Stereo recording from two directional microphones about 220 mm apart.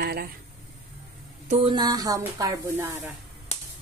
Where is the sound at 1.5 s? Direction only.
25° right (ahead or behind).